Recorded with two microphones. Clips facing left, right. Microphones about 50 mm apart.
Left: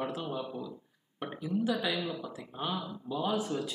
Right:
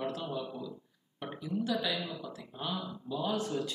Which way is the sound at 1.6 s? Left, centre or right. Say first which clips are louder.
Left 1 dB; centre.